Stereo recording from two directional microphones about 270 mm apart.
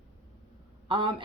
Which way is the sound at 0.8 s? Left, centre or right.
Centre.